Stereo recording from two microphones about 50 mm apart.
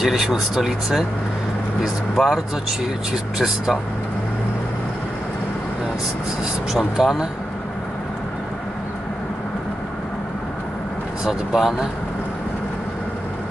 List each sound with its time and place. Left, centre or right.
0.0 s speech: centre
7.0 s speech: centre
11.2 s speech: centre